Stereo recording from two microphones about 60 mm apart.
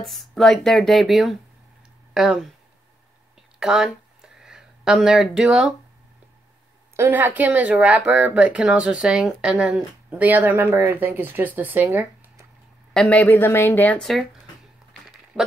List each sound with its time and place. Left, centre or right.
0.0 s speech: centre
3.5 s a sound: centre
7.1 s speech: right
10.0 s speech: right
10.7 s speech: right
12.9 s a man's voice: left
13.3 s speech: left